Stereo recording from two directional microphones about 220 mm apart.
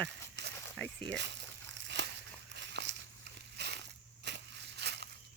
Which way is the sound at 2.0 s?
55° right (ahead or behind).